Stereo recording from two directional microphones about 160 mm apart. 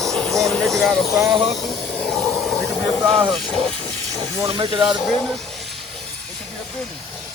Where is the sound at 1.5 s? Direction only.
5° left (ahead or behind).